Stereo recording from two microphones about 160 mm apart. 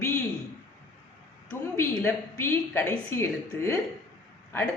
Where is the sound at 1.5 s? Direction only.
15° left (ahead or behind).